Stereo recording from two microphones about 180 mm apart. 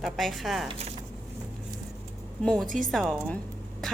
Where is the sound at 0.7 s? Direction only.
35° right (ahead or behind).